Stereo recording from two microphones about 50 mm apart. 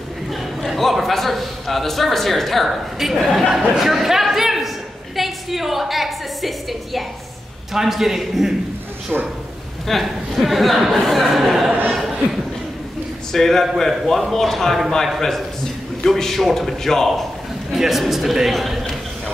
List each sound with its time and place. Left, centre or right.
0.3 s a sound: centre
7.7 s speech: centre
9.1 s speech: centre
10.0 s speech: centre
11.9 s a sound: centre
13.3 s a man's voice: centre
17.7 s speech: centre